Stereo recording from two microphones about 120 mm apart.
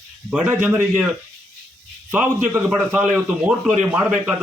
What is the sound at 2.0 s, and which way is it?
Speech, 15° right (ahead or behind).